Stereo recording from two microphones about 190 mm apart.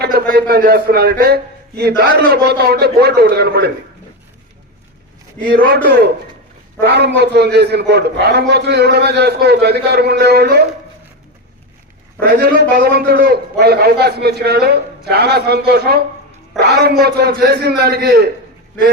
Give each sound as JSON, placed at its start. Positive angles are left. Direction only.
{"t": 0.0, "sound": "a man's voice", "side_deg": -55}
{"t": 6.7, "sound": "a man's voice", "side_deg": -60}
{"t": 12.2, "sound": "a man's voice", "side_deg": -55}